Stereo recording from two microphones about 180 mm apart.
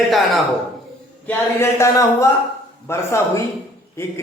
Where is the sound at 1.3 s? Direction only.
15° left (ahead or behind).